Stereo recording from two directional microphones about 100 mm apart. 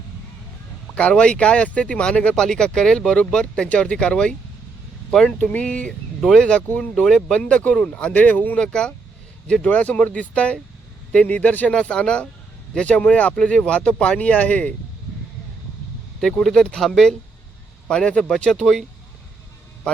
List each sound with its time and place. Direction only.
0.9 s speech: 10° left (ahead or behind)
6.9 s speech: 5° left (ahead or behind)
16.2 s speech: 5° left (ahead or behind)